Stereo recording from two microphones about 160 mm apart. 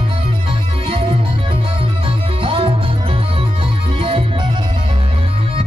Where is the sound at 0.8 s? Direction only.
35° right (ahead or behind).